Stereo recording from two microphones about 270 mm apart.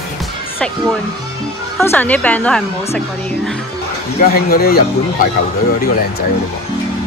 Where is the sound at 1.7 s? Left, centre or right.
Centre.